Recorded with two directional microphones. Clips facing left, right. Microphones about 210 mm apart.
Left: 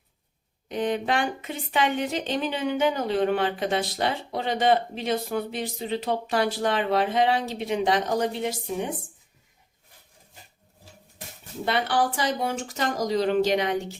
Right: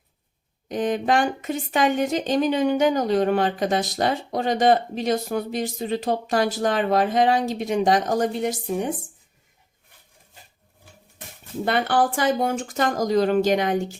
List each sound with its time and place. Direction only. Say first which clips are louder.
0.7 s a woman's voice: right 4 dB; 45° right (ahead or behind)
11.6 s a woman's voice: right 3 dB; 50° right (ahead or behind)